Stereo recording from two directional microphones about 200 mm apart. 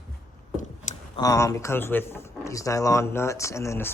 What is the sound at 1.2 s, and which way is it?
A man's voice, 15° left (ahead or behind).